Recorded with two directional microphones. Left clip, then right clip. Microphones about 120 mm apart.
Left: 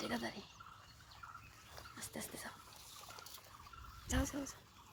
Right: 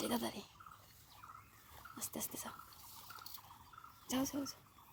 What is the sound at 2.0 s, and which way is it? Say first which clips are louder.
Speech: right 2 dB; 90° right.